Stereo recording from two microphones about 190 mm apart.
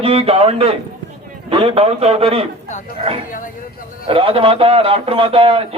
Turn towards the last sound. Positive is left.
turn(degrees=-30)  # may be behind; listen again after turning